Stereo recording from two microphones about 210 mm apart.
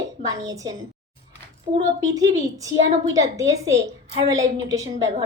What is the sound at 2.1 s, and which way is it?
A woman's voice, 15° right (ahead or behind).